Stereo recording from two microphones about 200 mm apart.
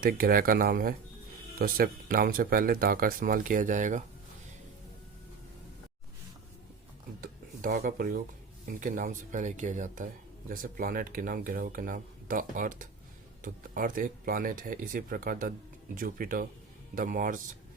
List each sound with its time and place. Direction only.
0.0 s speech: 45° right (ahead or behind)
7.2 s speech: 45° right (ahead or behind)